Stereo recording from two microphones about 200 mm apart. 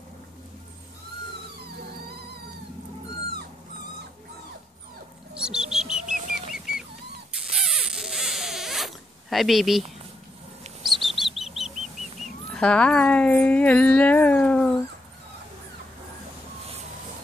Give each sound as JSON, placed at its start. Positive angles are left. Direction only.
{"t": 5.3, "sound": "bird", "side_deg": -5}
{"t": 6.5, "sound": "music", "side_deg": 0}
{"t": 7.3, "sound": "rodents", "side_deg": 0}
{"t": 10.8, "sound": "bird", "side_deg": 0}